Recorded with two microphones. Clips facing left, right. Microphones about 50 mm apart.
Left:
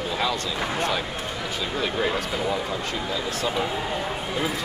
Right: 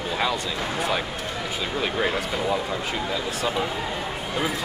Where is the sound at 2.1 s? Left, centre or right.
Centre.